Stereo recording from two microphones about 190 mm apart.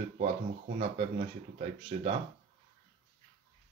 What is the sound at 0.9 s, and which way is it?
Speech, 35° right (ahead or behind).